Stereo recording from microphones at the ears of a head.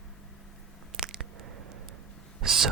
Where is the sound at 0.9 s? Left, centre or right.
Right.